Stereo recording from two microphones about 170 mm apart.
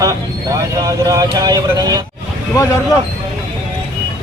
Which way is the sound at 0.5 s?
20° right (ahead or behind).